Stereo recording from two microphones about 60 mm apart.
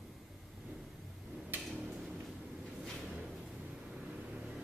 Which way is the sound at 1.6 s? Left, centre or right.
Centre.